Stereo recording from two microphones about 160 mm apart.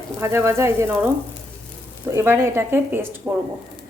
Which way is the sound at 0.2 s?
15° right (ahead or behind).